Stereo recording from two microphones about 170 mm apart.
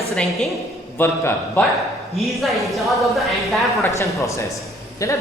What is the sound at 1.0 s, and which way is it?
Speech, 15° left (ahead or behind).